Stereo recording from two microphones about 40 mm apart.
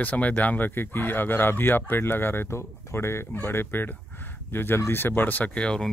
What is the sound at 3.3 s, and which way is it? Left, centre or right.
Speech, left.